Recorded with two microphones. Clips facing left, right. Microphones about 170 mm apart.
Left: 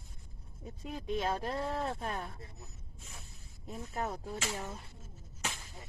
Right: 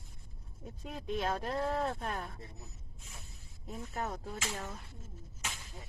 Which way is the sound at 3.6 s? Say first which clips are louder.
Left 1 dB; 5° left (ahead or behind).